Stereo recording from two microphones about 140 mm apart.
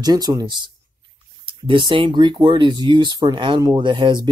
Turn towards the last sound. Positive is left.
turn(degrees=-30)  # may be behind; listen again after turning